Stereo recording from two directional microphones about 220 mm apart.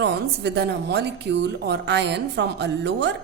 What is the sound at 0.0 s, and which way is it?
A woman's voice, 50° right (ahead or behind).